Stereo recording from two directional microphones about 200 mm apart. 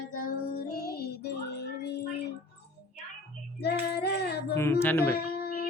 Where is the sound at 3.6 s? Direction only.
55° left (ahead or behind).